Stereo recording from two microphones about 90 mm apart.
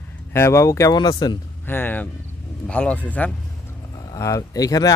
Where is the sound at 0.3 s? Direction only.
30° left (ahead or behind).